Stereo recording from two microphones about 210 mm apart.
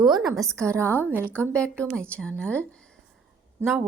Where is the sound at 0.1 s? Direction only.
Centre (ahead or behind).